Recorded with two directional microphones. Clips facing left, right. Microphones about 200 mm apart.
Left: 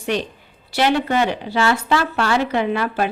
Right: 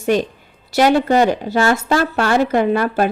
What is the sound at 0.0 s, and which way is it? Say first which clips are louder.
A woman's voice: right 6 dB; 45° right (ahead or behind).